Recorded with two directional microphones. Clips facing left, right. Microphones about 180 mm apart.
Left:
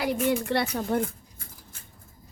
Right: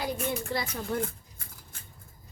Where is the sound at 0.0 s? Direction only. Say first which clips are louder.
Left 6 dB; 75° left (ahead or behind).